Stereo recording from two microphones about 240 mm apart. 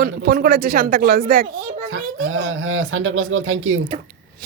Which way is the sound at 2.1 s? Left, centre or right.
Right.